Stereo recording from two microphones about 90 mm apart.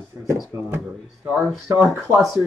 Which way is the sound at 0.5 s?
35° right (ahead or behind).